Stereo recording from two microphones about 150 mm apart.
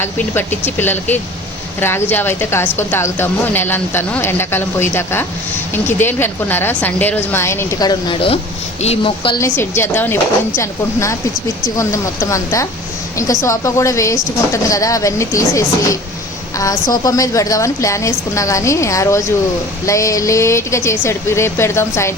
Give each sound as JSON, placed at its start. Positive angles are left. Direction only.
{"t": 0.0, "sound": "a woman's voice", "side_deg": 15}
{"t": 9.4, "sound": "a woman's voice", "side_deg": 15}